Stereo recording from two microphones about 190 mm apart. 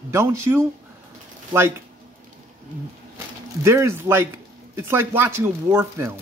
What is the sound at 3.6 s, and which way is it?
Speech, 15° right (ahead or behind).